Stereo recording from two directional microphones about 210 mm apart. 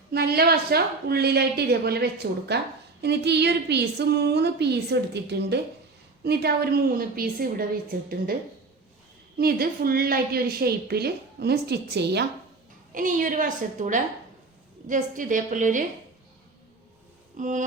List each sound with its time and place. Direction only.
0.1 s a woman's voice: 50° right (ahead or behind)
9.4 s a woman's voice: 45° right (ahead or behind)
12.9 s a woman's voice: 40° right (ahead or behind)
17.3 s a woman's voice: 35° right (ahead or behind)